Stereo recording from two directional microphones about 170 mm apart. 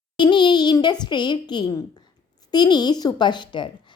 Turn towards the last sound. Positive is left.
turn(degrees=25)  # may be behind; listen again after turning